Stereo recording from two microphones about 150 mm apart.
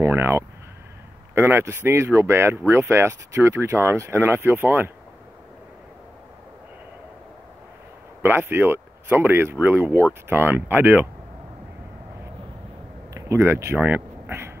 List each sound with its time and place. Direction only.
0.0 s speech: 15° right (ahead or behind)
8.2 s speech: 15° right (ahead or behind)
13.1 s speech: 20° right (ahead or behind)